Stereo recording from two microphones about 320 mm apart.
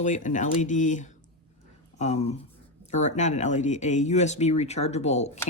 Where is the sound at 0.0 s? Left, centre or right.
Left.